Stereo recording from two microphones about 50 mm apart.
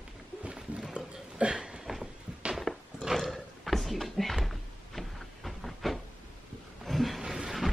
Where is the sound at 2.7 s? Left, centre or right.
Centre.